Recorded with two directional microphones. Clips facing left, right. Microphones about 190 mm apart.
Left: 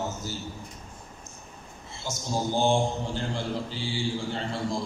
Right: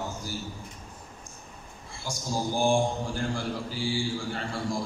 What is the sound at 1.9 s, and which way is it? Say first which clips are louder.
A man's voice: left 1 dB; 20° left (ahead or behind).